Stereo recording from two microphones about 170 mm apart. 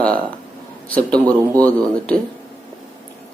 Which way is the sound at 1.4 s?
20° right (ahead or behind).